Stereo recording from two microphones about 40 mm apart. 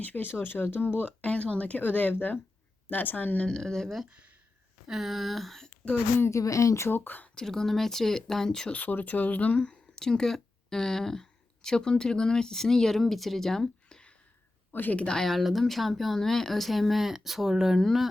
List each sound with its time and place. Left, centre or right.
0.0 s speech: left
1.2 s speech: left
1.8 s speech: left
3.4 s speech: centre
3.8 s speech: centre
6.8 s speech: left
7.3 s speech: centre
8.7 s speech: left
9.6 s speech: centre
14.7 s speech: left
14.9 s speech: left
15.4 s speech: centre